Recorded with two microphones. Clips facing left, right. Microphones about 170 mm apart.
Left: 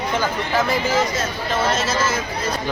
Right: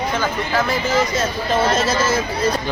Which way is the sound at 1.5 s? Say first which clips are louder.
Right 3 dB; 35° right (ahead or behind).